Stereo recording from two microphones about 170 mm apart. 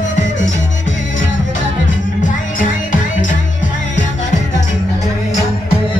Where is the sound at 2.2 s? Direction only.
50° left (ahead or behind).